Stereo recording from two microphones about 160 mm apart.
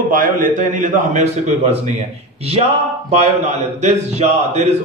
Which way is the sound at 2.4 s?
40° right (ahead or behind).